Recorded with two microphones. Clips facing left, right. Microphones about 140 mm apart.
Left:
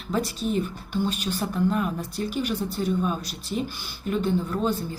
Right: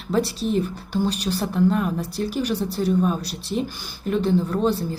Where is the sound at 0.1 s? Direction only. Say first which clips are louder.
Right 4 dB; 35° right (ahead or behind).